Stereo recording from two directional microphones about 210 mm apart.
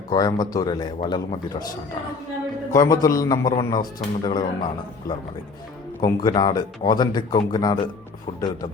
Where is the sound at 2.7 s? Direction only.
15° left (ahead or behind).